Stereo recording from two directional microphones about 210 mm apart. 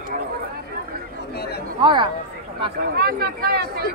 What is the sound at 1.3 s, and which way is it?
Chatter, 50° left (ahead or behind).